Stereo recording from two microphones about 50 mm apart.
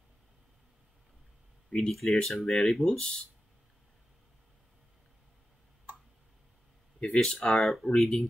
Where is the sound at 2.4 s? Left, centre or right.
Centre.